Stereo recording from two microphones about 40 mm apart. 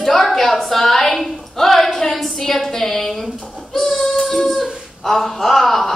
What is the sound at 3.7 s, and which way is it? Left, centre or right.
Child singing, centre.